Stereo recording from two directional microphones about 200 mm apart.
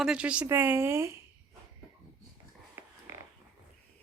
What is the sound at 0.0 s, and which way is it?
A woman's voice, 5° right (ahead or behind).